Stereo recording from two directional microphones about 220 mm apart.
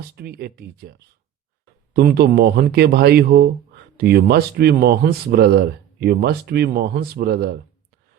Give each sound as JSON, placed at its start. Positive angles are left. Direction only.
{"t": 0.2, "sound": "speech", "side_deg": -45}